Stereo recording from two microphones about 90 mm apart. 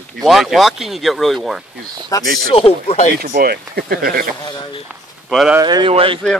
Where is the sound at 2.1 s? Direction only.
40° left (ahead or behind).